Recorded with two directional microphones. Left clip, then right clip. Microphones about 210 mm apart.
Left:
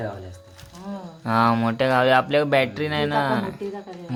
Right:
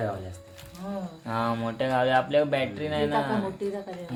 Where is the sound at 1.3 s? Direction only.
45° left (ahead or behind).